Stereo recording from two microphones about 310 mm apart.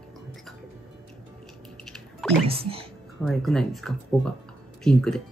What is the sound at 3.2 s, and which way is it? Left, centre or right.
Speech, centre.